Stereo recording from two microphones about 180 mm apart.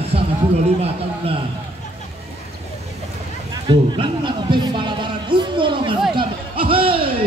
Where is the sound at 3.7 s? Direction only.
25° right (ahead or behind).